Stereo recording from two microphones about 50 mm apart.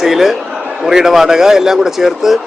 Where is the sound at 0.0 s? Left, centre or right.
Centre.